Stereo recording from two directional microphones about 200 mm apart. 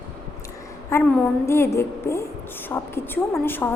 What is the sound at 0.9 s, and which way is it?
A woman's voice, 15° left (ahead or behind).